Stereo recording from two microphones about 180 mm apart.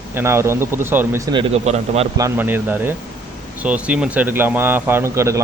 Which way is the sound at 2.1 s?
15° right (ahead or behind).